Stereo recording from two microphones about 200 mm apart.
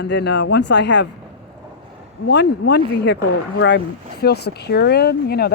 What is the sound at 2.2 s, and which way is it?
Speech, 60° left (ahead or behind).